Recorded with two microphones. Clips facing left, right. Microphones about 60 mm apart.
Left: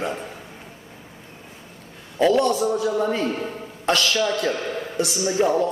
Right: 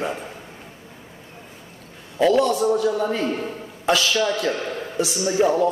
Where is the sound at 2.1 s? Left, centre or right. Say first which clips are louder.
Right 1 dB; centre.